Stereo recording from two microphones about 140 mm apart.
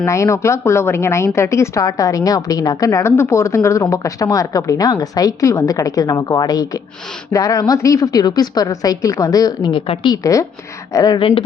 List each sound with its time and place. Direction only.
0.0 s speech: 20° left (ahead or behind); by 10.1 s 40° left (ahead or behind)
10.1 s speech: 25° left (ahead or behind)
11.2 s speech: 40° left (ahead or behind)